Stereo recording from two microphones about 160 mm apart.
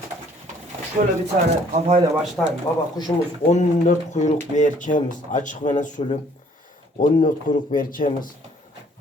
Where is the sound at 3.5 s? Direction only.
45° left (ahead or behind).